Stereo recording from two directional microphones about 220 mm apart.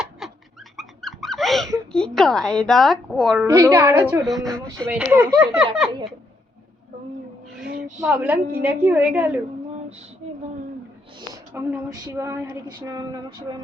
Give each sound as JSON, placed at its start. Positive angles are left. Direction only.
{"t": 0.2, "sound": "bird", "side_deg": 0}
{"t": 0.8, "sound": "dog", "side_deg": 0}
{"t": 2.1, "sound": "speech", "side_deg": 0}
{"t": 3.4, "sound": "a woman's voice", "side_deg": -15}
{"t": 4.2, "sound": "a woman's voice", "side_deg": 0}
{"t": 8.0, "sound": "a woman's voice", "side_deg": -10}
{"t": 11.5, "sound": "a woman's voice", "side_deg": -15}